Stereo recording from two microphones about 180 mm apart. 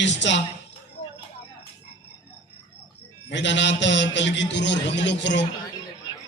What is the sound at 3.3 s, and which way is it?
A man's voice, 80° left.